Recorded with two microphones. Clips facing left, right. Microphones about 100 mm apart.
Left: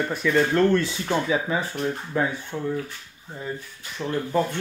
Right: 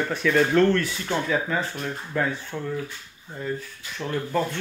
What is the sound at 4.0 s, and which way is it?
Speech, 10° left (ahead or behind).